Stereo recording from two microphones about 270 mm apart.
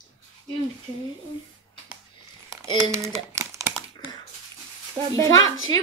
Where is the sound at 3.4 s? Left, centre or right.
Centre.